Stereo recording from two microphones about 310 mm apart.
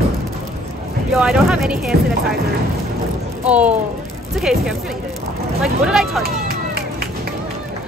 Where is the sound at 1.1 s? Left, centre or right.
Centre.